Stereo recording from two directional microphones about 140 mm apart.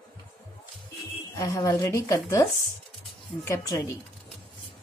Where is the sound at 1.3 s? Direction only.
25° left (ahead or behind).